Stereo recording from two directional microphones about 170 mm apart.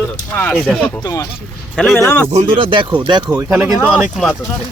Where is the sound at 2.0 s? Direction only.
15° left (ahead or behind).